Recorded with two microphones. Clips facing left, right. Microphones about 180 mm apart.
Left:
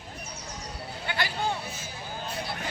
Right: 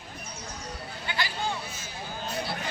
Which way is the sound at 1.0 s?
55° left (ahead or behind).